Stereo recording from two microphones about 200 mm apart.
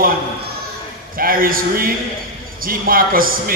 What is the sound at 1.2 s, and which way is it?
A man's voice, 45° right (ahead or behind).